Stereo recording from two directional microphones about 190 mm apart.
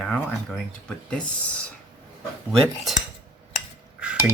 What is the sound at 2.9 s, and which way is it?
Cutlery, centre (ahead or behind).